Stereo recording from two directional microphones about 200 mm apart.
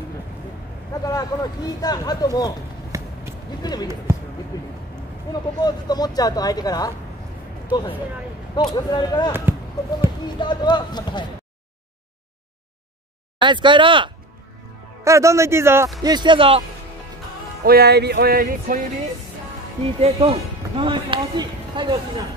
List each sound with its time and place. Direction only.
1.0 s speech: 20° left (ahead or behind)
2.9 s a sound: 15° right (ahead or behind)
3.6 s speech: 20° left (ahead or behind)
4.1 s basketball bounce: 15° right (ahead or behind)
5.3 s speech: 20° left (ahead or behind)
8.7 s speech: 20° left (ahead or behind)
10.4 s speech: 20° left (ahead or behind)
13.4 s speech: 25° right (ahead or behind)
17.6 s music: 50° right (ahead or behind)
20.0 s speech: 30° right (ahead or behind)